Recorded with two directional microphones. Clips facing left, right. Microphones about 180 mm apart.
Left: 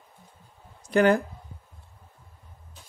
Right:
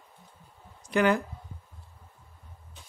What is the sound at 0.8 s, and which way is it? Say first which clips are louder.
Speech: left 4 dB; 45° left (ahead or behind).